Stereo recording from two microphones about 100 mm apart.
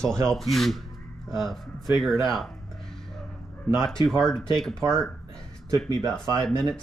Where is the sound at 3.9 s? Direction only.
5° left (ahead or behind).